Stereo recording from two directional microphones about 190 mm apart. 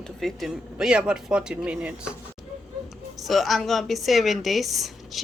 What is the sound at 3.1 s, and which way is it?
Speech, centre (ahead or behind).